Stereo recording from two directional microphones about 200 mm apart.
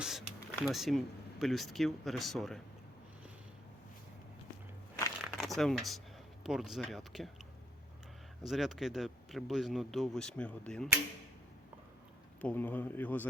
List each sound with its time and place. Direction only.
0.0 s speech: centre (ahead or behind)
5.2 s a sound: centre (ahead or behind)
6.4 s speech: centre (ahead or behind)
8.4 s speech: centre (ahead or behind)
12.4 s speech: 10° left (ahead or behind)